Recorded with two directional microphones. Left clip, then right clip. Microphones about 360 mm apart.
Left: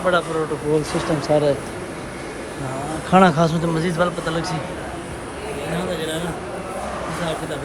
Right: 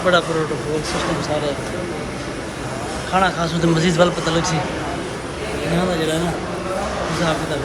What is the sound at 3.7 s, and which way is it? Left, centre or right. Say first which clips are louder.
Speech: right 4 dB; centre.